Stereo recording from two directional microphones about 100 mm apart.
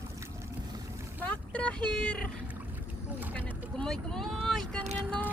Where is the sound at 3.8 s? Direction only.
5° left (ahead or behind).